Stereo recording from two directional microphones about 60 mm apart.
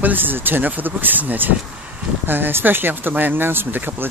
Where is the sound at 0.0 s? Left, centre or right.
Right.